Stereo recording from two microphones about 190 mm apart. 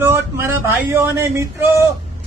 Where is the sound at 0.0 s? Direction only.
10° right (ahead or behind).